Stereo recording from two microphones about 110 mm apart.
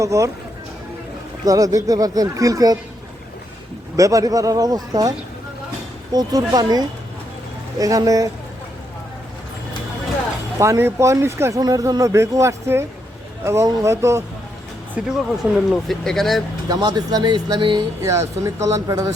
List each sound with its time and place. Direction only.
0.0 s speech: 30° right (ahead or behind)
1.5 s speech: 30° right (ahead or behind)
3.9 s speech: 30° right (ahead or behind)
10.6 s speech: 25° right (ahead or behind)
14.9 s speech: 5° right (ahead or behind)
16.6 s speech: 35° right (ahead or behind)
18.0 s speech: 25° right (ahead or behind)